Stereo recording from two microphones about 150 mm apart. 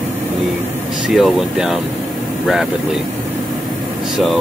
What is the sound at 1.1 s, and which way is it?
Speech, centre (ahead or behind).